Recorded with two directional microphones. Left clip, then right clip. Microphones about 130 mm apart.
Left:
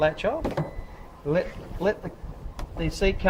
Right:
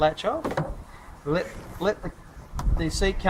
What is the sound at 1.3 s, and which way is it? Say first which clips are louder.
Speech: left 1 dB; 35° left (ahead or behind).